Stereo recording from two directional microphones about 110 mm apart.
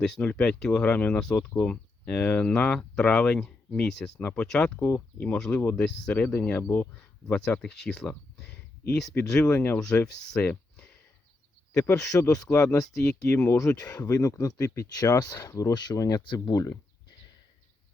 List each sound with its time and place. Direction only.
0.0 s speech: 10° left (ahead or behind)
13.6 s speech: 30° left (ahead or behind)